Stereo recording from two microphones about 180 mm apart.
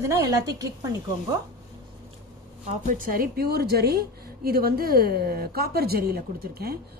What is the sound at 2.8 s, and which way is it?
A woman's voice, 50° right (ahead or behind).